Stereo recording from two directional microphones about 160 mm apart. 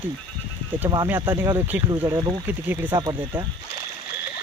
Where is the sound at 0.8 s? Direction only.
25° right (ahead or behind).